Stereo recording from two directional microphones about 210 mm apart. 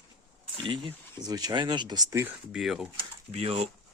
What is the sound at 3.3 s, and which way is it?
Speech, 30° right (ahead or behind).